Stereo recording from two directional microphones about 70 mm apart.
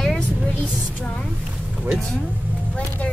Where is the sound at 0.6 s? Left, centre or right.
Centre.